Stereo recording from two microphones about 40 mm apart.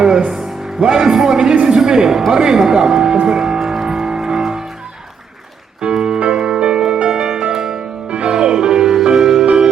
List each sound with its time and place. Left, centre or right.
0.3 s speech: centre
3.2 s music: centre
5.8 s music: centre